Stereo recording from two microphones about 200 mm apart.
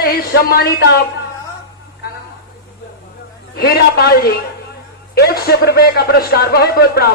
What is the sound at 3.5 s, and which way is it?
A woman's voice, 50° left (ahead or behind).